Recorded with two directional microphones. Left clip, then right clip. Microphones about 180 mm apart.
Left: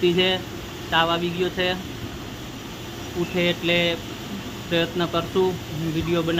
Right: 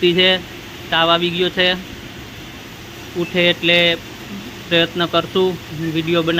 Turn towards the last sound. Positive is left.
turn(degrees=-15)  # may be behind; listen again after turning